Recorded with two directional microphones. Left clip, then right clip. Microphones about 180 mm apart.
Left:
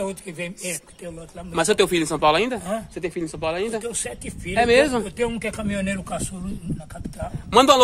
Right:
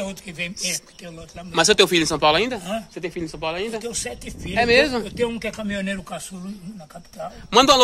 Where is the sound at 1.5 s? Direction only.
5° right (ahead or behind); by 3.8 s 15° left (ahead or behind).